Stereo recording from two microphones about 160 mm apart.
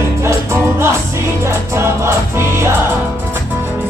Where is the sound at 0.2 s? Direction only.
15° right (ahead or behind).